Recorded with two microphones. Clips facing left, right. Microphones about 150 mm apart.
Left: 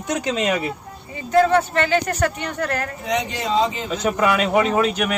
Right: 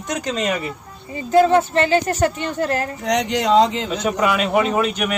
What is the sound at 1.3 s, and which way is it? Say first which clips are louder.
A woman's voice: right 2 dB; 25° right (ahead or behind).